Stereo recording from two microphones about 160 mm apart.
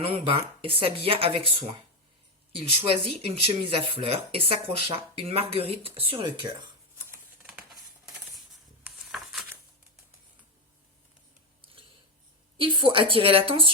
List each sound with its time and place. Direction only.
0.0 s speech: 35° right (ahead or behind)
7.4 s a sound: 5° right (ahead or behind)
12.5 s speech: 35° right (ahead or behind)